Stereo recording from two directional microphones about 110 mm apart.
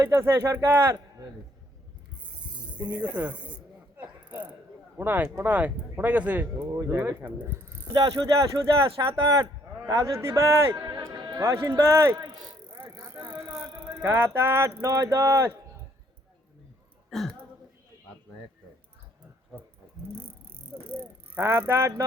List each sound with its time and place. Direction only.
0.0 s a man's voice: 25° right (ahead or behind)
2.9 s speech: 15° right (ahead or behind)
3.9 s mechanisms: 15° right (ahead or behind)
4.9 s speech: 15° right (ahead or behind)
6.4 s a man's voice: 30° right (ahead or behind)
13.0 s bicycle: 35° right (ahead or behind)
13.6 s a sound: 20° right (ahead or behind)
14.3 s a man's voice: 20° right (ahead or behind)
17.1 s speech: centre (ahead or behind)
20.7 s a sound: 5° right (ahead or behind)
21.3 s a man's voice: 20° right (ahead or behind)